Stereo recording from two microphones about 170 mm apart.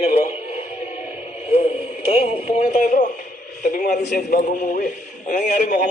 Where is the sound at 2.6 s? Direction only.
50° left (ahead or behind).